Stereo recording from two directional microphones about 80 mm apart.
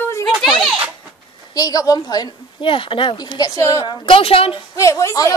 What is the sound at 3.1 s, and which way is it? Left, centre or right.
Speech, left.